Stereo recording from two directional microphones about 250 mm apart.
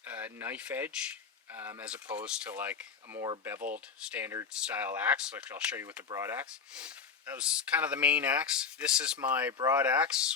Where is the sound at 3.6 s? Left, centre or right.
Right.